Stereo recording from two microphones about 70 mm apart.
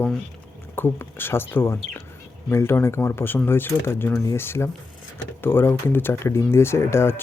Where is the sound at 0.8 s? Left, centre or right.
Left.